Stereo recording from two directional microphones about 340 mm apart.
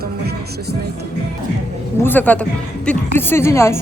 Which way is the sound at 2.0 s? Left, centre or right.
Centre.